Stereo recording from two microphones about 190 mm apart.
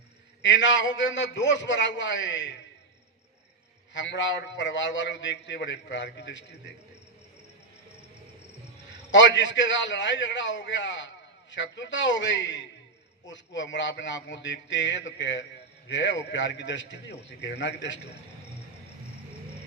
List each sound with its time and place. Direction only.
0.4 s a man's voice: 75° left (ahead or behind)
3.9 s a man's voice: 75° left (ahead or behind)
9.1 s a man's voice: 75° left (ahead or behind)